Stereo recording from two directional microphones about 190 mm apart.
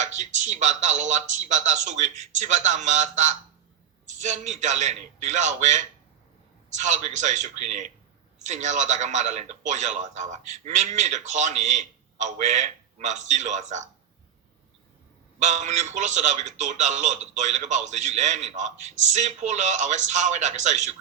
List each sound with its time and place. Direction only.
0.0 s a man's voice: 35° right (ahead or behind)
15.4 s a man's voice: 40° right (ahead or behind)